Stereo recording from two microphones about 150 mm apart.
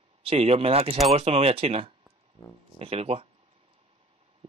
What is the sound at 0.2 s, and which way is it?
Speech, 40° right (ahead or behind).